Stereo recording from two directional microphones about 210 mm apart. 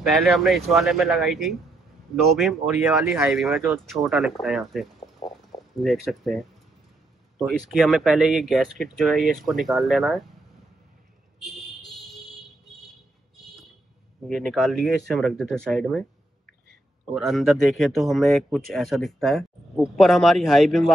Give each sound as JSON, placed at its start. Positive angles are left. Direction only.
{"t": 0.0, "sound": "speech", "side_deg": 0}
{"t": 5.0, "sound": "a sound", "side_deg": 20}
{"t": 5.8, "sound": "speech", "side_deg": 0}
{"t": 7.4, "sound": "speech", "side_deg": 0}
{"t": 11.3, "sound": "a sound", "side_deg": 0}
{"t": 14.2, "sound": "speech", "side_deg": 0}
{"t": 17.1, "sound": "speech", "side_deg": 0}